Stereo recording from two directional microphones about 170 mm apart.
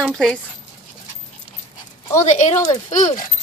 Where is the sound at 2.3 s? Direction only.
45° left (ahead or behind).